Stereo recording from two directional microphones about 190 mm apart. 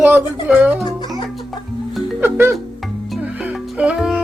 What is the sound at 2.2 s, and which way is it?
Music, 10° right (ahead or behind).